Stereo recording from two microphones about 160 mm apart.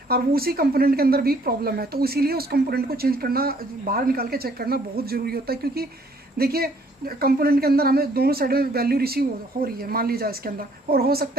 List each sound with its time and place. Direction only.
0.1 s a woman's voice: 70° right (ahead or behind)